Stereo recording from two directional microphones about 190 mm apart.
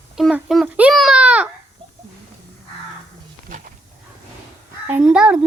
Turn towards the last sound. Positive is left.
turn(degrees=-5)  # may be behind; listen again after turning